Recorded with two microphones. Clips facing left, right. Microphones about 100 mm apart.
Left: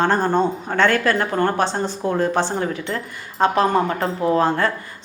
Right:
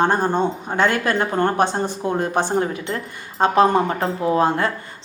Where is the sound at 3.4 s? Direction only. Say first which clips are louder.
Right 1 dB; 25° right (ahead or behind).